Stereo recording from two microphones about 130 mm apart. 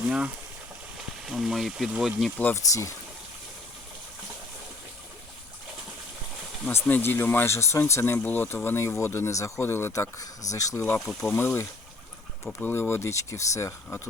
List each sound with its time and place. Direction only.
0.0 s frying: 10° right (ahead or behind)
1.2 s speech: 5° right (ahead or behind)
2.6 s speech: 25° left (ahead or behind)
6.7 s speech: 15° left (ahead or behind)
11.0 s speech: 5° left (ahead or behind)
11.3 s speech: 15° left (ahead or behind)